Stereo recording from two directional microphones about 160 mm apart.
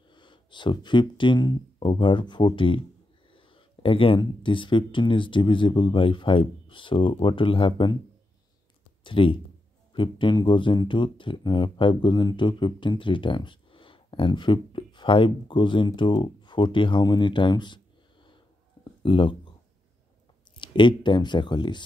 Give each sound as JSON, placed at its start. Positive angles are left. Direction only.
{"t": 0.1, "sound": "speech", "side_deg": 30}
{"t": 9.0, "sound": "speech", "side_deg": 30}
{"t": 20.6, "sound": "speech", "side_deg": 30}